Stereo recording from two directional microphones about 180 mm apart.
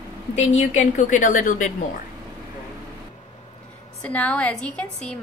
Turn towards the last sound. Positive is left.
turn(degrees=5)  # may be behind; listen again after turning